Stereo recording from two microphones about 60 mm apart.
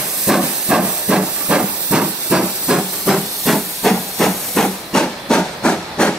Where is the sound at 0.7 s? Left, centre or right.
Centre.